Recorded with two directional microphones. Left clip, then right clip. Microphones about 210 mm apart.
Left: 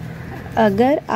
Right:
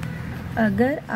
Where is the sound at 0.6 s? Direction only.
20° left (ahead or behind).